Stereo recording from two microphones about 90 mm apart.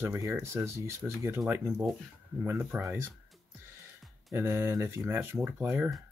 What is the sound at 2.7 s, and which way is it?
Speech, 25° right (ahead or behind).